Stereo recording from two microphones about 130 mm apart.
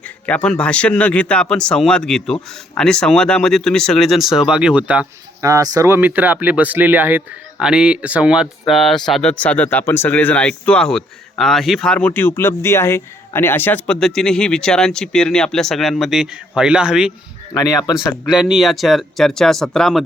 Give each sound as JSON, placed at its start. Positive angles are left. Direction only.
{"t": 0.3, "sound": "speech", "side_deg": 10}
{"t": 5.4, "sound": "speech", "side_deg": -25}
{"t": 17.5, "sound": "speech", "side_deg": 30}
{"t": 17.9, "sound": "speech", "side_deg": -5}